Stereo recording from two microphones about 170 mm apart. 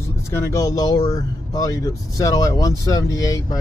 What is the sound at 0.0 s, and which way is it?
Speech, 15° left (ahead or behind).